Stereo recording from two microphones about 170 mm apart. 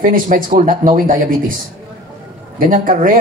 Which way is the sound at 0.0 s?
55° right (ahead or behind).